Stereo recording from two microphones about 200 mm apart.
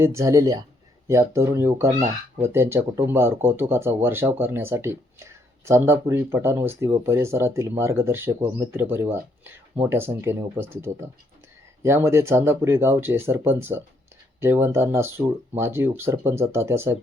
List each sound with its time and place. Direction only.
0.0 s speech: 15° right (ahead or behind)